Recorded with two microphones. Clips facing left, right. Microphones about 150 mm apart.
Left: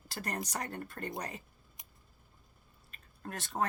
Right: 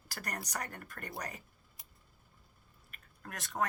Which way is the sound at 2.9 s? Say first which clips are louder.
Left 5 dB; 30° left (ahead or behind).